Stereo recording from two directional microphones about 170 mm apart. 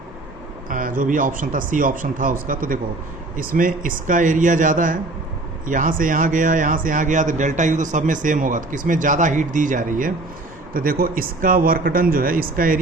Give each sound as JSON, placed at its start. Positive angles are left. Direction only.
{"t": 0.7, "sound": "speech", "side_deg": -50}